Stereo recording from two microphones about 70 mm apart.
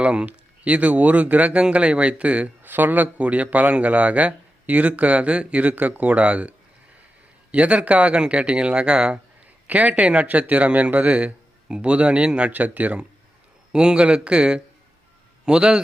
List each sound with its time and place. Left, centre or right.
0.0 s speech: centre
7.5 s speech: centre